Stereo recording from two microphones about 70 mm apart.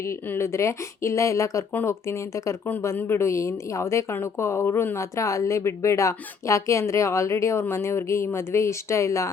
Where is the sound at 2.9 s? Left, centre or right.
Left.